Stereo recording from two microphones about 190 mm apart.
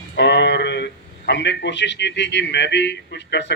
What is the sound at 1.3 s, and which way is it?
A man's voice, 65° left (ahead or behind).